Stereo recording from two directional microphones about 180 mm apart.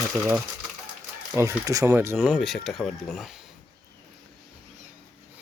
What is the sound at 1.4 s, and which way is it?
Speech, 20° right (ahead or behind).